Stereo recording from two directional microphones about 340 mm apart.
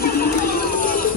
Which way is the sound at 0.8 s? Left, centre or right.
Left.